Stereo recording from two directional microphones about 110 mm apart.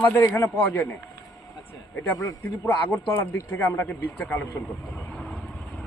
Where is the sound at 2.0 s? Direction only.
20° left (ahead or behind).